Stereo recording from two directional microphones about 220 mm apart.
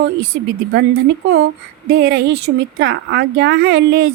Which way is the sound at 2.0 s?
50° right (ahead or behind).